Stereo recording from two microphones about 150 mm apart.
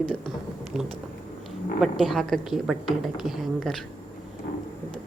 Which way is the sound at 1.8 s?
Centre (ahead or behind).